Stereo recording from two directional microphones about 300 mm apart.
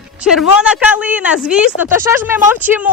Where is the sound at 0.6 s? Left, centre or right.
Centre.